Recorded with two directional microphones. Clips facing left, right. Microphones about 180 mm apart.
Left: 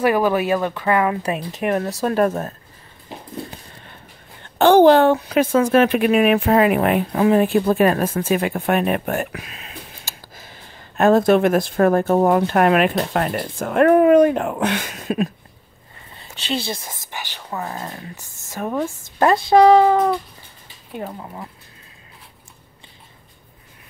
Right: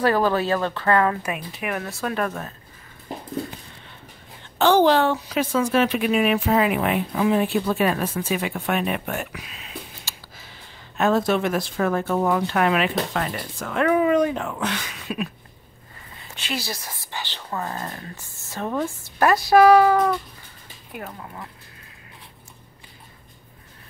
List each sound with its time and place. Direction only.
0.0 s speech: 15° left (ahead or behind)
1.2 s speech: 35° left (ahead or behind)
4.6 s speech: 55° left (ahead or behind)
16.2 s speech: 30° left (ahead or behind)
17.1 s a woman's voice: 10° left (ahead or behind)
19.1 s speech: 25° left (ahead or behind)